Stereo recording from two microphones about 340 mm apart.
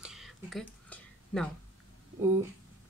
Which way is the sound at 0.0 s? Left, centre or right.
Centre.